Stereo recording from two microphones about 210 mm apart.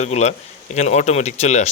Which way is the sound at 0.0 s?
30° left (ahead or behind).